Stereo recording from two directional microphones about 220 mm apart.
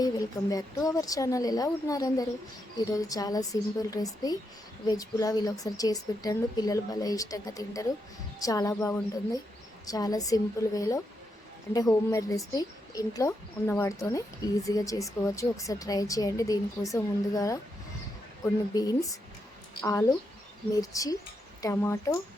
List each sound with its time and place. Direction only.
0.5 s a woman's voice: 15° left (ahead or behind)
18.7 s a woman's voice: 15° left (ahead or behind)